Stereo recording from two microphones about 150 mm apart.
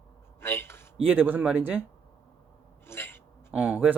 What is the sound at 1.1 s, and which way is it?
Speech, 10° right (ahead or behind).